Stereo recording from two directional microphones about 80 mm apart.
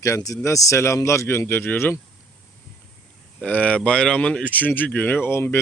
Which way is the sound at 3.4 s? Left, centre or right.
Centre.